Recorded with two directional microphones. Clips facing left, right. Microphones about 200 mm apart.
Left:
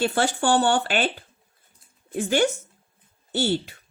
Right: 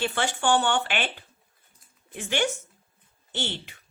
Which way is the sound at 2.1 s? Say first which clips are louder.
Left 6 dB; 40° left (ahead or behind).